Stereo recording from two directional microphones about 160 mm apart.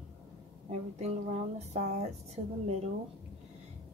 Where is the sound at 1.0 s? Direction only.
45° right (ahead or behind).